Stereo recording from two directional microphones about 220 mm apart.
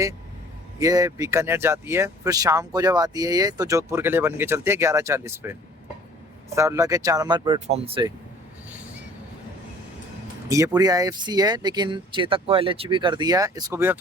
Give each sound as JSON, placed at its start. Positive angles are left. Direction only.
{"t": 0.8, "sound": "speech", "side_deg": -15}
{"t": 6.6, "sound": "speech", "side_deg": -15}
{"t": 10.5, "sound": "speech", "side_deg": -15}